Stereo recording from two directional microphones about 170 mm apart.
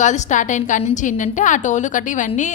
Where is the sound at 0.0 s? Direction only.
45° left (ahead or behind).